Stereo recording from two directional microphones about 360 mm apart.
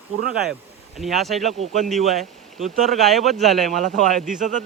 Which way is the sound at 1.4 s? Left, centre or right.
Centre.